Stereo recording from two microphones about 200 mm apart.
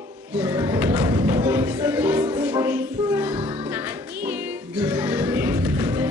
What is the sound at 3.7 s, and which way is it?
Music, 10° right (ahead or behind).